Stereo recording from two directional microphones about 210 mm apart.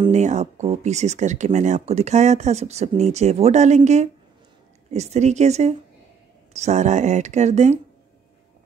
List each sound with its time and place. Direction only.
0.0 s speech: 35° right (ahead or behind)